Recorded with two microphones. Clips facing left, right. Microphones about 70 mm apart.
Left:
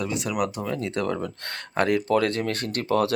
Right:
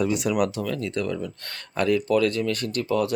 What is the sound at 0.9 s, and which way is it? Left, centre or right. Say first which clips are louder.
Speech: left 1 dB; left.